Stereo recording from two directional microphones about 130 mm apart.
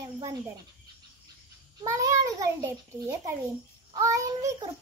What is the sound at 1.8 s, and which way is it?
A child's voice, 25° right (ahead or behind).